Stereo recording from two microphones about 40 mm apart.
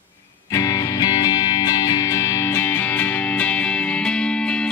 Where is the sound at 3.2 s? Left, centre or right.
Left.